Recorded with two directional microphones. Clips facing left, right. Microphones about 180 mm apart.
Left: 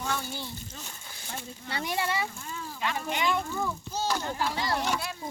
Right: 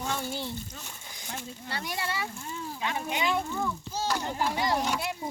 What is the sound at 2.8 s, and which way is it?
Speech, 15° right (ahead or behind).